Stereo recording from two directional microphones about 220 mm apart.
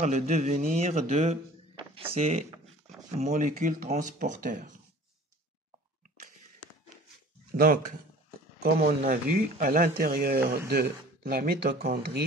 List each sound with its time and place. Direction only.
0.0 s speech: 30° right (ahead or behind)
7.5 s speech: 45° right (ahead or behind)